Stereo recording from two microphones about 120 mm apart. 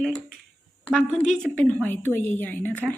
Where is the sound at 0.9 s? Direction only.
5° left (ahead or behind).